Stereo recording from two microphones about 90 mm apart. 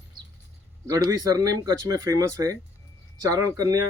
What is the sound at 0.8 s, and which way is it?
Speech, 40° right (ahead or behind).